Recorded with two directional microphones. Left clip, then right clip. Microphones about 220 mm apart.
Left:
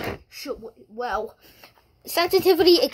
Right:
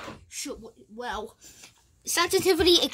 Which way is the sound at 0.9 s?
20° right (ahead or behind).